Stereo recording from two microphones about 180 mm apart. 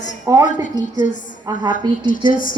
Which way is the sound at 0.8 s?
45° left (ahead or behind).